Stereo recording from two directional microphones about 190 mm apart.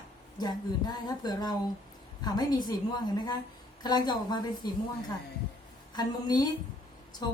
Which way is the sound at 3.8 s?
20° left (ahead or behind).